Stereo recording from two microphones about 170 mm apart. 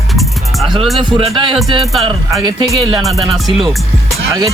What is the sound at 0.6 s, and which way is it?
Speech, 30° right (ahead or behind).